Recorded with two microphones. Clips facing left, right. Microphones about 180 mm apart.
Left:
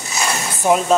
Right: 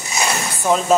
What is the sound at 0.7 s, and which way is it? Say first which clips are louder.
Speech: left 2 dB; 15° left (ahead or behind).